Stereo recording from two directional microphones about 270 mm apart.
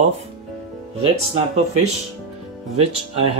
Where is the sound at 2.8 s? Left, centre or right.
Right.